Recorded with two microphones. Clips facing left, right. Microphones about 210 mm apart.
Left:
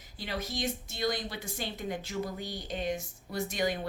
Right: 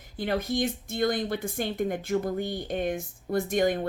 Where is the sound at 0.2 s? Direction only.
55° right (ahead or behind).